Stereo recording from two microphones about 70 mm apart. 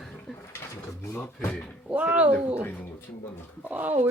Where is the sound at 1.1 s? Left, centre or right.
Left.